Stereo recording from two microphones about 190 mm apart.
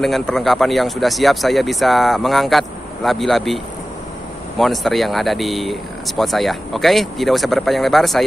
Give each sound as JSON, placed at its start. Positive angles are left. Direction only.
{"t": 0.0, "sound": "speech", "side_deg": 0}